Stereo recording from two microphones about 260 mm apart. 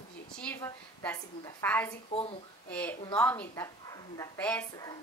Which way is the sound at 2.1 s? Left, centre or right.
Left.